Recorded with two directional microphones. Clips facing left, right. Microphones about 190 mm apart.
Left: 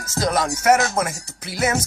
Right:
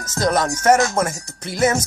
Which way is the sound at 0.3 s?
5° left (ahead or behind).